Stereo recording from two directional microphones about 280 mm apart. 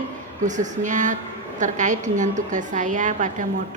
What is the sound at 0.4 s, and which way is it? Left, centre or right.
A woman's voice, right.